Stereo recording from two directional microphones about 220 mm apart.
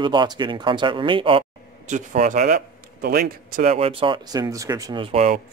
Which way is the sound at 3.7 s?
25° right (ahead or behind).